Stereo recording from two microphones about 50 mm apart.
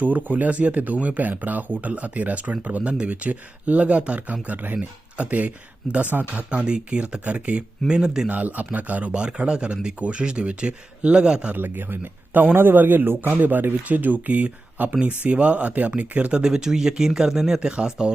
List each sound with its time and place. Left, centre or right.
0.0 s speech: right
6.3 s speech: right
7.9 s speech: centre
8.3 s speech: right
11.5 s speech: right
16.4 s speech: centre